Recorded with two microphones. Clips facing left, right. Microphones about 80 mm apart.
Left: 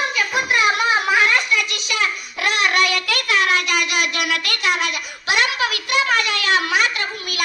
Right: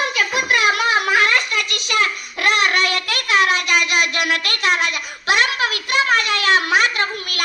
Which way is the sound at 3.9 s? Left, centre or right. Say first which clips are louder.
Right 2 dB; right.